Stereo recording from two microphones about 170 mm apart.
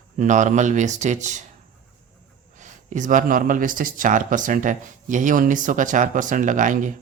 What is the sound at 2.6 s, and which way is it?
Speech, 45° right (ahead or behind).